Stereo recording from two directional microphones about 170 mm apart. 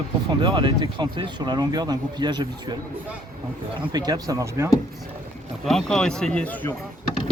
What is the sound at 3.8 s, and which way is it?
Speech, 25° right (ahead or behind).